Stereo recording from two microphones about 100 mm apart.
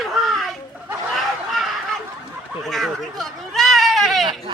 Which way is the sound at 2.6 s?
Centre (ahead or behind).